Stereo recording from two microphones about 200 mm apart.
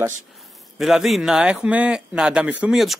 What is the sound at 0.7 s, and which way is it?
Speech, centre (ahead or behind).